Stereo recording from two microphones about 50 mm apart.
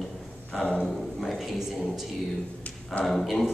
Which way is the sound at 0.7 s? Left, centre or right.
Centre.